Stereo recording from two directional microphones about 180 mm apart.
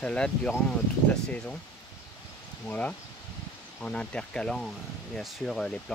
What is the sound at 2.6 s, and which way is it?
Speech, 10° left (ahead or behind).